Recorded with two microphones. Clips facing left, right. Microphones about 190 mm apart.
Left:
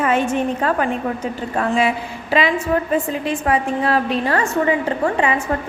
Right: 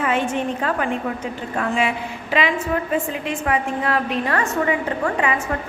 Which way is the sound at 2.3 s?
35° left (ahead or behind).